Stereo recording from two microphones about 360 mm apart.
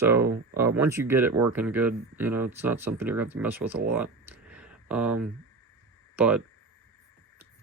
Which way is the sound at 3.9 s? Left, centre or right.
Centre.